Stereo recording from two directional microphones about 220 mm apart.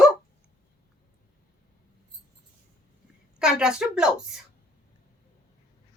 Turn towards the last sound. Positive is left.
turn(degrees=-5)  # may be behind; listen again after turning